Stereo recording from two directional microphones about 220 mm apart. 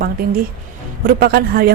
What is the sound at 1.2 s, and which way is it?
Speech, 45° right (ahead or behind).